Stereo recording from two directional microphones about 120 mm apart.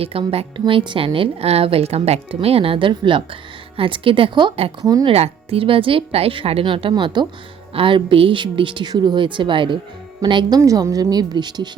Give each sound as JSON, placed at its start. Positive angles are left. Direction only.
{"t": 0.0, "sound": "a woman's voice", "side_deg": -50}
{"t": 4.8, "sound": "a woman's voice", "side_deg": -30}
{"t": 5.0, "sound": "a woman's voice", "side_deg": -55}
{"t": 10.6, "sound": "a woman's voice", "side_deg": -25}